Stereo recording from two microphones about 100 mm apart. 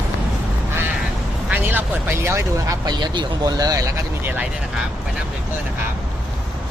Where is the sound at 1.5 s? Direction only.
20° right (ahead or behind).